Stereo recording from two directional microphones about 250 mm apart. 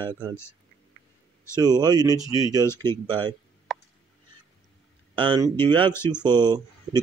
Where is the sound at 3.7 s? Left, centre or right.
Centre.